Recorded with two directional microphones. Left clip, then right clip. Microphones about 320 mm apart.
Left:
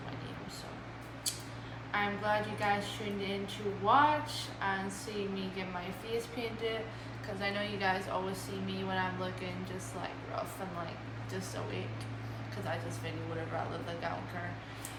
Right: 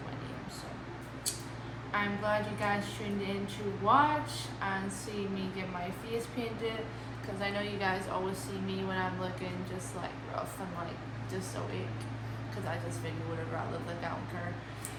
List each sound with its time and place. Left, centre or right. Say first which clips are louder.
1.9 s a woman's voice: even; centre
6.1 s a woman's voice: even; centre